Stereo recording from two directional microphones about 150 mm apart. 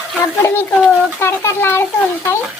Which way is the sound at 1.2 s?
15° left (ahead or behind).